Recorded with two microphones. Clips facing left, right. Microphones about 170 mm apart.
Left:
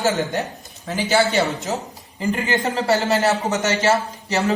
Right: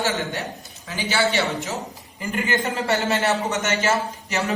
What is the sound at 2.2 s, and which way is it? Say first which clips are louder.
A man's voice: left 3 dB; 35° left (ahead or behind).